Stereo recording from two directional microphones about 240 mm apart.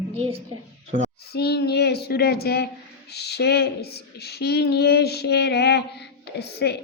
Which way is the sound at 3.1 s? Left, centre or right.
Left.